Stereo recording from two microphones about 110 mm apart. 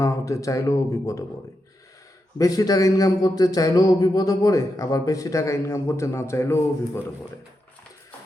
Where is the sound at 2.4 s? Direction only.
30° left (ahead or behind).